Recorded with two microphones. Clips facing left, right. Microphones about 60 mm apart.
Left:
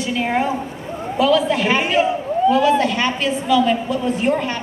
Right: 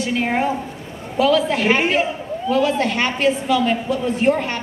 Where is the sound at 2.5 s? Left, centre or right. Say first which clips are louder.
Left 2 dB; left.